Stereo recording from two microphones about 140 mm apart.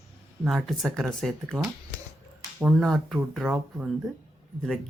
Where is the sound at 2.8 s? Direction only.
5° left (ahead or behind).